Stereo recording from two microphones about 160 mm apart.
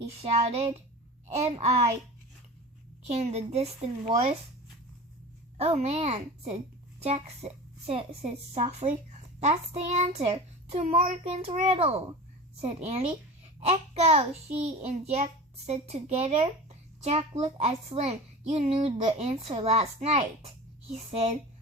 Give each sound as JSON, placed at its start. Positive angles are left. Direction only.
{"t": 0.2, "sound": "a child's voice", "side_deg": -40}
{"t": 3.1, "sound": "a child's voice", "side_deg": -40}
{"t": 5.5, "sound": "a child's voice", "side_deg": -40}